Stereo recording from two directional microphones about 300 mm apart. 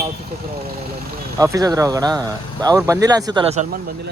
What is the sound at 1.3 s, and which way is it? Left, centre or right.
Speech, centre.